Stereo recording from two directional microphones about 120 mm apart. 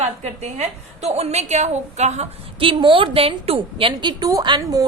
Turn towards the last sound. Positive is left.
turn(degrees=-30)  # may be behind; listen again after turning